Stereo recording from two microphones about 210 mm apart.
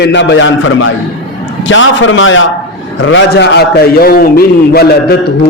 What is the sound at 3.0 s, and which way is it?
A man's voice, 60° left (ahead or behind).